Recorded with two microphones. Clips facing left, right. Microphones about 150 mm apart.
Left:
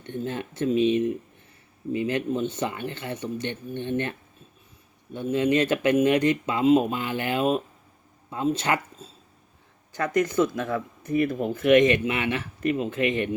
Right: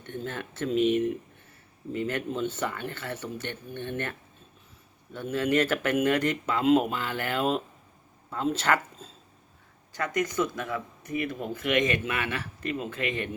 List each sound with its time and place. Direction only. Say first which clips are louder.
0.1 s speech: left 4 dB; 15° left (ahead or behind)
5.1 s speech: left 3 dB; 20° left (ahead or behind)
9.9 s speech: left 5 dB; 30° left (ahead or behind)